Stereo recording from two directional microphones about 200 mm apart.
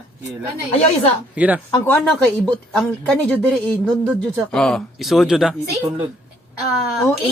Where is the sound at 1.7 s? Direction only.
10° left (ahead or behind).